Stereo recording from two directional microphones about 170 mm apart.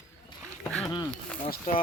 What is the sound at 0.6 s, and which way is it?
Speech, 5° left (ahead or behind).